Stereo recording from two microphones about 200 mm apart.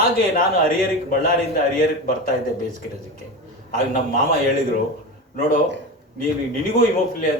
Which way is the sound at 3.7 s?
45° left (ahead or behind).